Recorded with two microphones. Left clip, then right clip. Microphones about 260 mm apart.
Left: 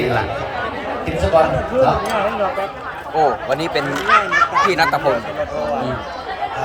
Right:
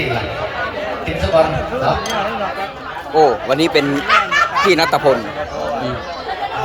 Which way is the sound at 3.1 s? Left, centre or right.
Right.